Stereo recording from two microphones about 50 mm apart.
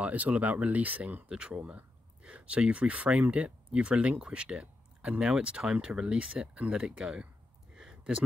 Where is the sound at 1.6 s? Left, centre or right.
Right.